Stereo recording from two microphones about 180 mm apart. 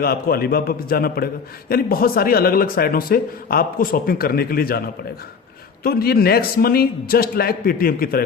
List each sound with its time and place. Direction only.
0.0 s speech: 60° left (ahead or behind)
5.8 s speech: 60° left (ahead or behind)